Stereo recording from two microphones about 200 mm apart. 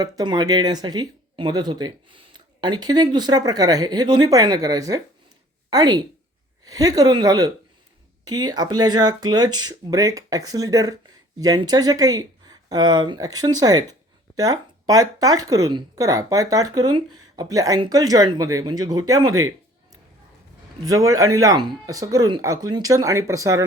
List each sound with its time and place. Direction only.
0.0 s a woman's voice: 20° right (ahead or behind)
20.8 s a woman's voice: 15° right (ahead or behind)